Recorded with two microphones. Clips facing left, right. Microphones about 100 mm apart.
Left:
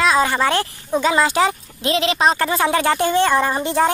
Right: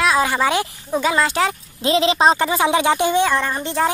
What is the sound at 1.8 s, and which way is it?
Speech, 25° right (ahead or behind).